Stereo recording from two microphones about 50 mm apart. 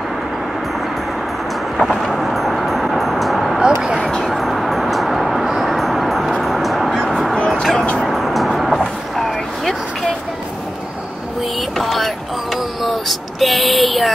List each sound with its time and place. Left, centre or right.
1.8 s vehicle: centre
4.2 s music: centre
7.0 s a sound: centre
7.3 s bow-wow: left
7.7 s music: left
8.0 s vehicle: centre
11.8 s vehicle: centre
12.8 s a sound: centre